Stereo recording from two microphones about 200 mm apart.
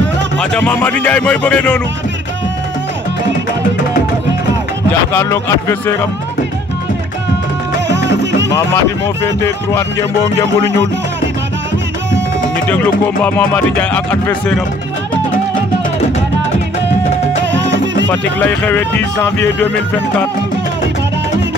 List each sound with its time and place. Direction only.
0.4 s speech: 5° left (ahead or behind)
5.1 s speech: 15° left (ahead or behind)
7.9 s music: 60° right (ahead or behind)
8.5 s speech: 10° left (ahead or behind)
12.6 s speech: 5° left (ahead or behind)
18.0 s speech: 10° left (ahead or behind)